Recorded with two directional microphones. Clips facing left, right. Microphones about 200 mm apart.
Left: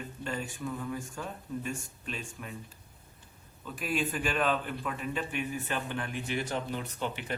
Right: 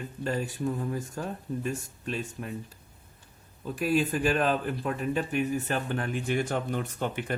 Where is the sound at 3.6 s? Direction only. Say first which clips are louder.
Right 6 dB; 40° right (ahead or behind).